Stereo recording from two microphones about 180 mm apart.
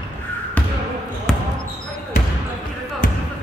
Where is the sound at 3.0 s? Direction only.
50° left (ahead or behind).